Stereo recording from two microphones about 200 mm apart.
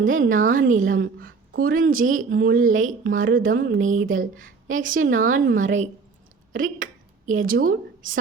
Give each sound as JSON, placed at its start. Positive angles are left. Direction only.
{"t": 0.0, "sound": "a woman's voice", "side_deg": -40}
{"t": 6.5, "sound": "a sound", "side_deg": -40}
{"t": 7.4, "sound": "a woman's voice", "side_deg": -45}